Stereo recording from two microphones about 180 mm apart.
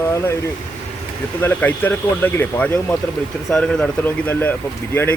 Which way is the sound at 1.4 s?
10° left (ahead or behind).